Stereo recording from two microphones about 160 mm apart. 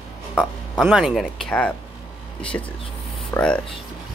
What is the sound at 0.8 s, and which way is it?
Speech, centre (ahead or behind).